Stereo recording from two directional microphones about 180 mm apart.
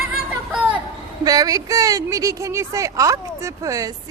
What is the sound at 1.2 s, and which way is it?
Speech, 20° right (ahead or behind).